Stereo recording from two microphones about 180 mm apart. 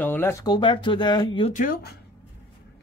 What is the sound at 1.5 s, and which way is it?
Speech, 50° left (ahead or behind).